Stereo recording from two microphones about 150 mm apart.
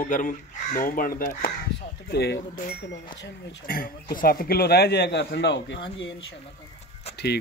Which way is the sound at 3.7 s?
70° left (ahead or behind).